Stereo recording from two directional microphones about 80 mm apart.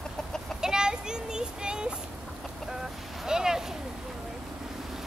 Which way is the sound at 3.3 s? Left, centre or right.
Centre.